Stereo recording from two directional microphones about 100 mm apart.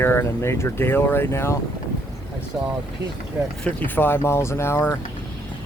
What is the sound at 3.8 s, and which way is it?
Speech, 20° left (ahead or behind).